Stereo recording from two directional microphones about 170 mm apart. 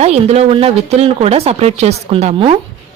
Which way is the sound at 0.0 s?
40° right (ahead or behind).